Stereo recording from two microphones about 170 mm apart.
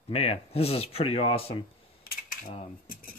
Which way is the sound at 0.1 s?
35° left (ahead or behind).